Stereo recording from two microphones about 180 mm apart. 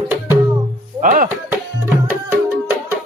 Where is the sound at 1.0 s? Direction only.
45° right (ahead or behind).